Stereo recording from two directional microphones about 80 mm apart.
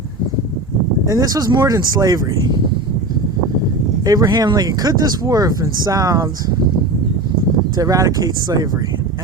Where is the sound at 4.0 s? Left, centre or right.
Right.